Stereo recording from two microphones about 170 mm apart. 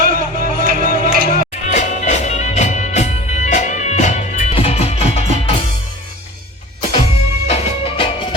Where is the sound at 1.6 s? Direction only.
45° left (ahead or behind).